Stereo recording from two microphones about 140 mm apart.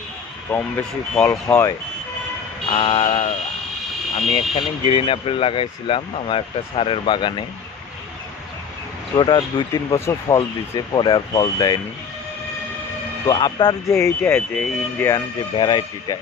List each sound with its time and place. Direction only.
0.5 s speech: 10° left (ahead or behind)
2.7 s speech: 40° left (ahead or behind)
9.1 s speech: 35° left (ahead or behind)
9.9 s speech: 20° left (ahead or behind)
13.2 s speech: 30° left (ahead or behind); by 15.0 s 5° left (ahead or behind)
15.5 s speech: 35° left (ahead or behind)